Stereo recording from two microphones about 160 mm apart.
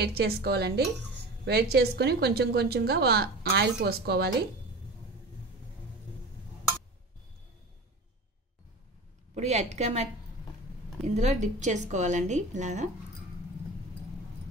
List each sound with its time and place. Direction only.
0.0 s a woman's voice: 85° right
9.3 s a woman's voice: 45° right (ahead or behind)
11.1 s a woman's voice: 45° right (ahead or behind)